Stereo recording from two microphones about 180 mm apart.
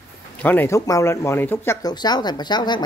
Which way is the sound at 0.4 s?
10° left (ahead or behind).